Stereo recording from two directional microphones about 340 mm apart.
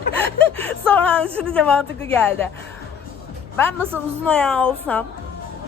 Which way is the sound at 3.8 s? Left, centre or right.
Centre.